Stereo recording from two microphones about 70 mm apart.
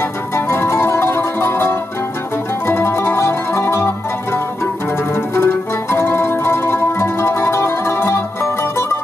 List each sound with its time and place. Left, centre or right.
0.5 s music: left